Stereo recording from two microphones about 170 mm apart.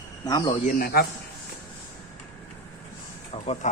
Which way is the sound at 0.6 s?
55° left (ahead or behind).